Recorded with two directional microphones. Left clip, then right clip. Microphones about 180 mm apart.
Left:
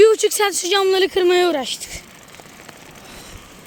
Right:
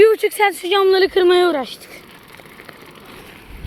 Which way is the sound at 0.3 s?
15° left (ahead or behind).